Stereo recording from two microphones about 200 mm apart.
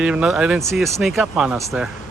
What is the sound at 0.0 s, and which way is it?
Speech, 5° right (ahead or behind).